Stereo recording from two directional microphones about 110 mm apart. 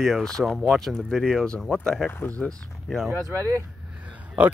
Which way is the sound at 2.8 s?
Centre (ahead or behind).